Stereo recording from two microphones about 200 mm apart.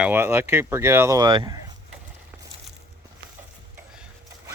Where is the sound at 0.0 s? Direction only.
10° right (ahead or behind).